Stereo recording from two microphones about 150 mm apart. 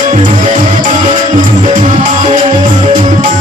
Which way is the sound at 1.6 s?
55° right (ahead or behind).